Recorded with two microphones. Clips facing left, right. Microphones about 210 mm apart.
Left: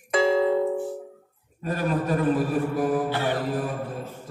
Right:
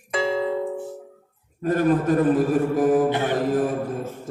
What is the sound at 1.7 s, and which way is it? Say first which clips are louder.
Mantra: right 6 dB; 45° right (ahead or behind).